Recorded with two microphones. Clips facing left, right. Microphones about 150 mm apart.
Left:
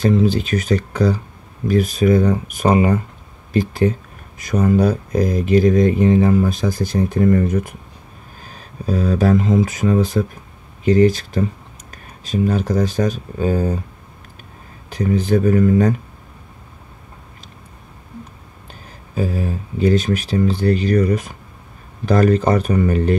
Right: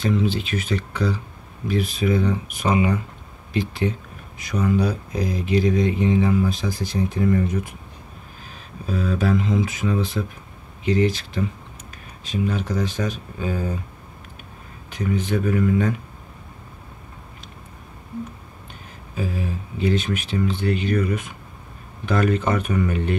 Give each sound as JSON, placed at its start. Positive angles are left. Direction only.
{"t": 0.0, "sound": "speech", "side_deg": 40}
{"t": 14.9, "sound": "speech", "side_deg": 35}
{"t": 18.7, "sound": "speech", "side_deg": 40}